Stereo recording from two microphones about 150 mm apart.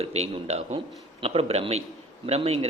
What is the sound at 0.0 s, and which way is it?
A man's voice, 45° right (ahead or behind).